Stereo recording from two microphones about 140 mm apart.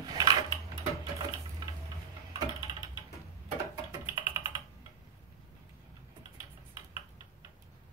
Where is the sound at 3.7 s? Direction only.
20° right (ahead or behind).